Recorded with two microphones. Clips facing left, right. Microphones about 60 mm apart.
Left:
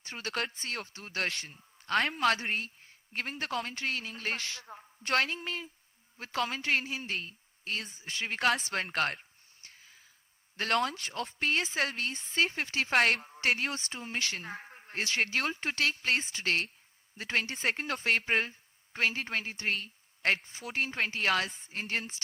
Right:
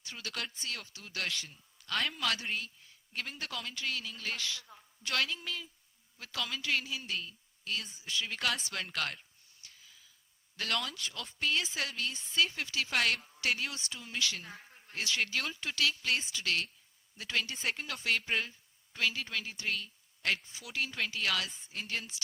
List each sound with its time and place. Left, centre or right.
0.0 s a woman's voice: left